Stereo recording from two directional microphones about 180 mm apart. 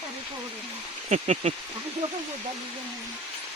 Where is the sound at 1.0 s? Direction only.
40° right (ahead or behind).